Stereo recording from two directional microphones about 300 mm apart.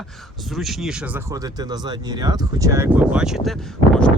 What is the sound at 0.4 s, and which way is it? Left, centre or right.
Speech, centre.